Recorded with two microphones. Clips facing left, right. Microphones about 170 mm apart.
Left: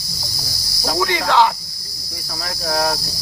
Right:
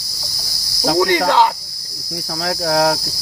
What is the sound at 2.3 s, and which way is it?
Cricket, 80° right.